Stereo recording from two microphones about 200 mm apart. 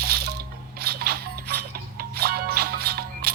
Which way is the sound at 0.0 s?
50° right (ahead or behind).